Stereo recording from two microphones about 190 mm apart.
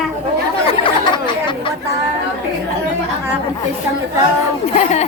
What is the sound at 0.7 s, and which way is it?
Chatter, 25° left (ahead or behind).